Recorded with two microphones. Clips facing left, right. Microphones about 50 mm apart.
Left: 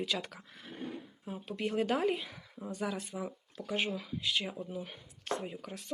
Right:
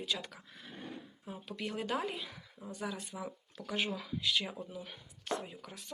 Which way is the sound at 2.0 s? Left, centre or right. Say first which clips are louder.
Left 8 dB; left.